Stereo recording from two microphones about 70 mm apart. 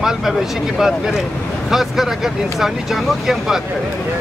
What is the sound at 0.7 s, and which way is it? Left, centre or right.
Speech, centre.